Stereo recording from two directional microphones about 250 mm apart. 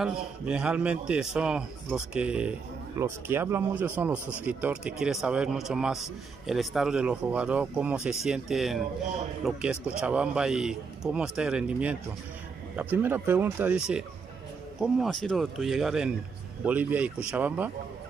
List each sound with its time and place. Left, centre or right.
0.0 s a man's voice: centre